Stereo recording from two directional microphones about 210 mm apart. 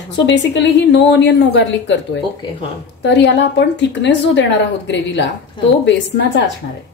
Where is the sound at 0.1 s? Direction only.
55° left (ahead or behind).